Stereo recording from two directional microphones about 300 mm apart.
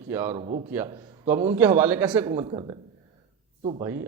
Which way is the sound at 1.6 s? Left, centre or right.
Centre.